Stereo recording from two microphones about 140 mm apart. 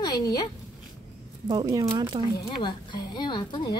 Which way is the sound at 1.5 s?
30° right (ahead or behind).